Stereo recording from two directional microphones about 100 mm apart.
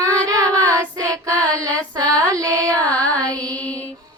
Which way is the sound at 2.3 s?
35° right (ahead or behind).